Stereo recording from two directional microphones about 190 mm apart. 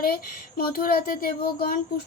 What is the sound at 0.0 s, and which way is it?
Speech, 50° left (ahead or behind).